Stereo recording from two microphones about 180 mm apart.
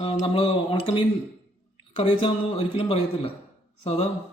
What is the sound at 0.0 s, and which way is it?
A woman's voice, 30° left (ahead or behind).